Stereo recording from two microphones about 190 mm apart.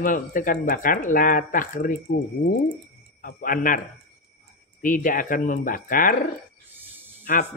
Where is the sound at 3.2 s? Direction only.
45° left (ahead or behind).